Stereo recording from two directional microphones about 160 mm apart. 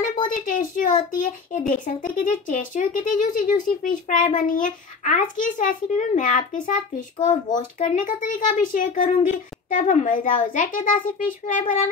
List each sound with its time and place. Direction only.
0.1 s a child's voice: 60° left (ahead or behind)